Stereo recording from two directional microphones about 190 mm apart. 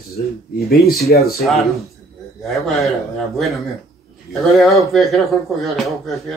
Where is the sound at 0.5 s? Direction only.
55° left (ahead or behind).